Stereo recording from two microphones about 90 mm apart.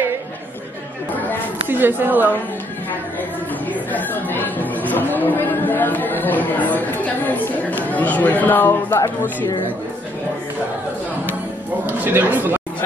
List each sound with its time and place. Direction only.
1.7 s speech: 25° right (ahead or behind)
3.9 s speech: 20° left (ahead or behind)
11.8 s speech: 20° right (ahead or behind)